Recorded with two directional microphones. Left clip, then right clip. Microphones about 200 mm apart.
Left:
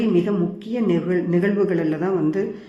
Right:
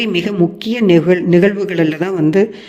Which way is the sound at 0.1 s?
45° right (ahead or behind).